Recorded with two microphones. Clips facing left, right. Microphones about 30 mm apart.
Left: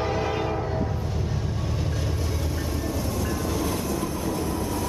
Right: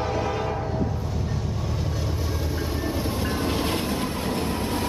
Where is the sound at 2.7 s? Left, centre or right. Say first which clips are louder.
Right 1 dB; right.